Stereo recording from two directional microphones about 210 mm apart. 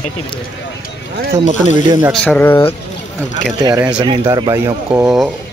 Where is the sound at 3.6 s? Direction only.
10° right (ahead or behind).